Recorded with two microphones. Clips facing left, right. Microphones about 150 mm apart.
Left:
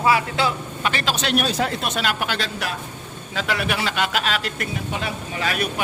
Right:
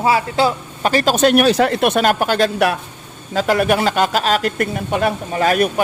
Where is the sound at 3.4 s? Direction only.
45° right (ahead or behind).